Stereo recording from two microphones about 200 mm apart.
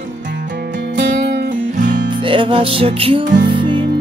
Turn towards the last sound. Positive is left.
turn(degrees=-25)  # may be behind; listen again after turning